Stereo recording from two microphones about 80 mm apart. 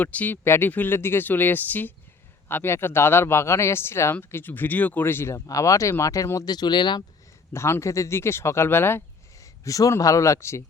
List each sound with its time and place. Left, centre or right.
0.0 s speech: centre; by 6.5 s left
6.5 s speech: left
7.5 s speech: left
9.4 s a sound: left
10.0 s speech: left